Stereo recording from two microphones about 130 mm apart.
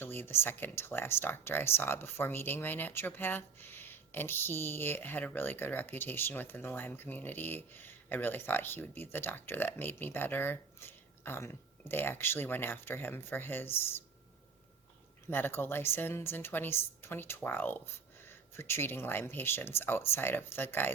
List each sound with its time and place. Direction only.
0.0 s speech: 15° left (ahead or behind)
15.3 s speech: 15° left (ahead or behind)